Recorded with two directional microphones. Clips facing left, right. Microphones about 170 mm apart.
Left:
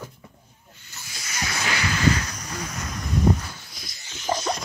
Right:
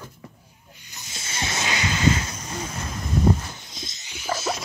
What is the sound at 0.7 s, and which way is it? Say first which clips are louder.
Snake: right 1 dB; 15° right (ahead or behind).